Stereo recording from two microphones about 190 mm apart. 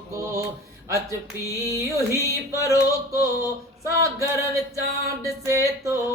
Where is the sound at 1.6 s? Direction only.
15° right (ahead or behind).